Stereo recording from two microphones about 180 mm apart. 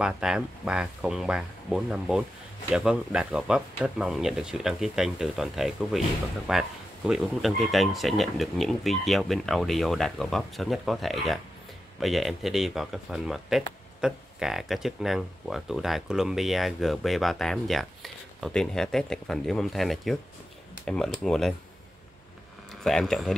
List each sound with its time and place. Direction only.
0.0 s speech: 5° right (ahead or behind)
22.8 s speech: centre (ahead or behind)